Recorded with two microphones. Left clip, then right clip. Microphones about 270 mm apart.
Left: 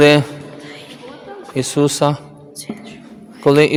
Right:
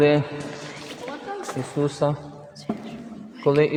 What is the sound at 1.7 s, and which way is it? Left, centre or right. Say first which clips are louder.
Speech: left 8 dB; left.